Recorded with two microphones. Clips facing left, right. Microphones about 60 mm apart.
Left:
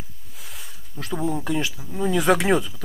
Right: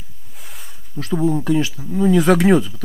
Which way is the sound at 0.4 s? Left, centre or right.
Centre.